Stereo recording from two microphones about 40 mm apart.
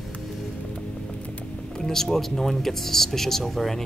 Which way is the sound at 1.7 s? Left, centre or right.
Centre.